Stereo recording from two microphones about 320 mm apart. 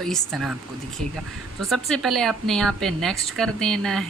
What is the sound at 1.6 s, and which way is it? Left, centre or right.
Speech, centre.